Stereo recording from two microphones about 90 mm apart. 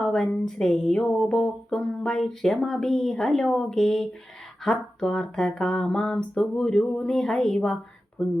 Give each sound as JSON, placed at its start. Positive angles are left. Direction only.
{"t": 0.0, "sound": "music", "side_deg": 5}